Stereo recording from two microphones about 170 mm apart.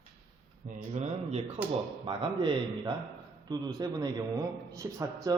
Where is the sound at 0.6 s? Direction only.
45° right (ahead or behind).